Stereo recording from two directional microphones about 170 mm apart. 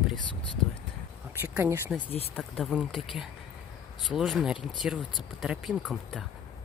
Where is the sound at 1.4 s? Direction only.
15° right (ahead or behind).